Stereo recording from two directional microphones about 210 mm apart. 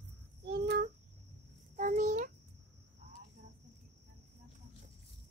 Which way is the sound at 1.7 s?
35° right (ahead or behind).